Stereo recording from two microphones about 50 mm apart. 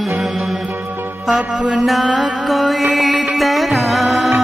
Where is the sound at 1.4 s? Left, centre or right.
Right.